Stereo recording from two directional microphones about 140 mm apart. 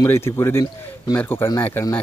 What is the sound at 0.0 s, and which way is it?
Speech, 20° left (ahead or behind).